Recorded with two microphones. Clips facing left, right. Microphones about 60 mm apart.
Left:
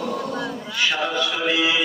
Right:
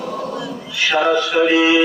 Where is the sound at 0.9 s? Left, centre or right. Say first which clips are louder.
Right 12 dB; right.